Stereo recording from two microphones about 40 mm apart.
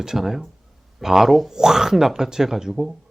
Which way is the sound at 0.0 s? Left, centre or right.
Centre.